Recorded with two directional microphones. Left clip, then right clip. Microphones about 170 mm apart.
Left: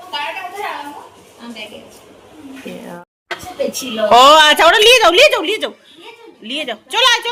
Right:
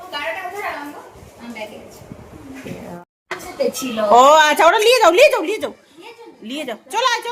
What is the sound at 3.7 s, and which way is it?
A woman's voice, centre (ahead or behind).